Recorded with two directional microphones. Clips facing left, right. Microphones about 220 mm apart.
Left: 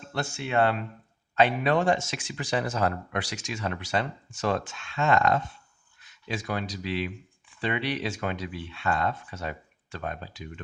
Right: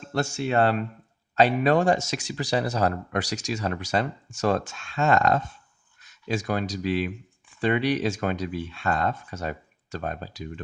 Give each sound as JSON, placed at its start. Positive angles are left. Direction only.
{"t": 0.1, "sound": "speech", "side_deg": -40}